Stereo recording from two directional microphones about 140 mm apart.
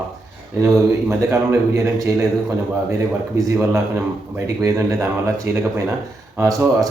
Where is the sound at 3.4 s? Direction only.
20° right (ahead or behind).